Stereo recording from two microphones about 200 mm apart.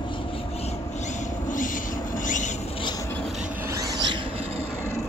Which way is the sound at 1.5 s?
40° left (ahead or behind).